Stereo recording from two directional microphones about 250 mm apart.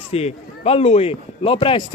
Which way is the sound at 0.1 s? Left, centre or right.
Left.